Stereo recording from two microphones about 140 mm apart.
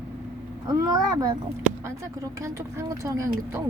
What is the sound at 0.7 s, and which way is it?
Speech, 25° right (ahead or behind).